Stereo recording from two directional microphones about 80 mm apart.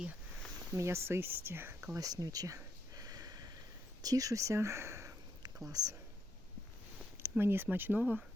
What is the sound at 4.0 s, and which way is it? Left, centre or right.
Speech, right.